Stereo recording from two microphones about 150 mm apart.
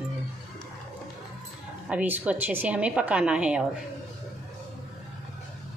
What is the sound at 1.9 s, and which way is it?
A woman's voice, 10° right (ahead or behind).